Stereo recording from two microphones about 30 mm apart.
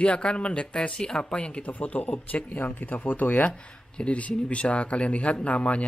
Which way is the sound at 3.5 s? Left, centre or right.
Left.